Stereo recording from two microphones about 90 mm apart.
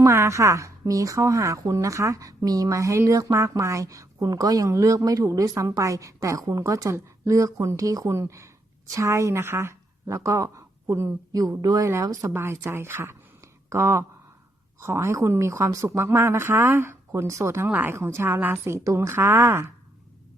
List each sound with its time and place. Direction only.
0.0 s a woman's voice: 35° right (ahead or behind)
11.3 s a woman's voice: 40° right (ahead or behind); by 19.7 s 25° right (ahead or behind)